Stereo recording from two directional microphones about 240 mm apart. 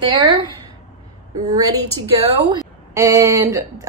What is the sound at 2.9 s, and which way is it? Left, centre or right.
Speech, centre.